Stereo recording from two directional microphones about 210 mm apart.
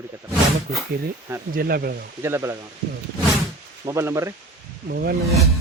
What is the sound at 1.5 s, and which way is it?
Speech, 45° right (ahead or behind).